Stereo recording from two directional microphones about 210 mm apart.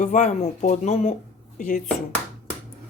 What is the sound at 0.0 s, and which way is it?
Speech, 35° left (ahead or behind).